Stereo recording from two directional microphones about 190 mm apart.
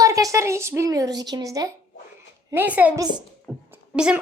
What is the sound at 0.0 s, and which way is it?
A woman's voice, 15° right (ahead or behind).